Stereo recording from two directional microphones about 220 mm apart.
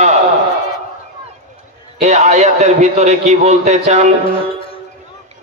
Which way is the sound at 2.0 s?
30° right (ahead or behind).